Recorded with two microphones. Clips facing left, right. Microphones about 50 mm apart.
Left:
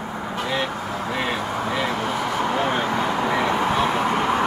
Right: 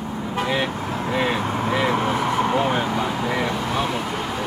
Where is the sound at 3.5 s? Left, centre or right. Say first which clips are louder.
Left 3 dB; left.